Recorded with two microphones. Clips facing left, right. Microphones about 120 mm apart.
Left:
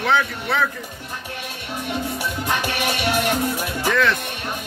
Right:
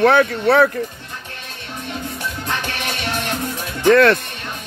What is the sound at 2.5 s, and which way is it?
Music, 10° left (ahead or behind).